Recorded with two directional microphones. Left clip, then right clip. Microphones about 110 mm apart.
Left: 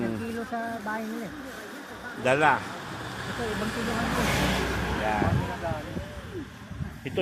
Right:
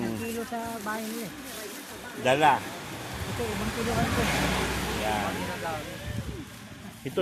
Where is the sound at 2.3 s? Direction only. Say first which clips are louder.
Even; 5° right (ahead or behind).